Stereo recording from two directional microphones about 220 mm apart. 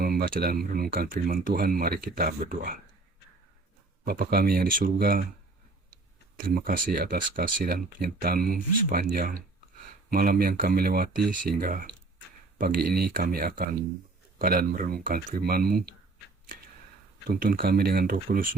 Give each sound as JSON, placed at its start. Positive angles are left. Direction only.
{"t": 0.0, "sound": "speech", "side_deg": -40}
{"t": 4.0, "sound": "speech", "side_deg": -45}
{"t": 6.3, "sound": "speech", "side_deg": -40}
{"t": 17.2, "sound": "speech", "side_deg": -40}